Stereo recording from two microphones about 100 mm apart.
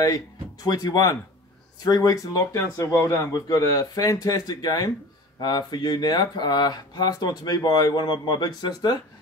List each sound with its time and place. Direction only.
0.7 s speech: 40° left (ahead or behind)